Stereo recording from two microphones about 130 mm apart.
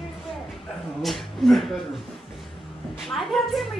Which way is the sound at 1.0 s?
Centre (ahead or behind).